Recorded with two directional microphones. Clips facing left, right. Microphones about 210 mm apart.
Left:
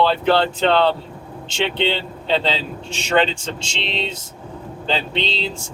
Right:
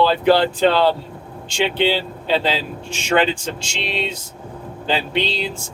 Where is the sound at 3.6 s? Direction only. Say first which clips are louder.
Even; 25° left (ahead or behind).